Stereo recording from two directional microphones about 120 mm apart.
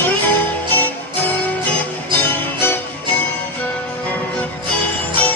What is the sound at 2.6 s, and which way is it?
Music, 15° left (ahead or behind).